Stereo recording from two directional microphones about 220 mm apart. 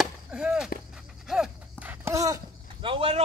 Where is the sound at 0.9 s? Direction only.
Centre (ahead or behind).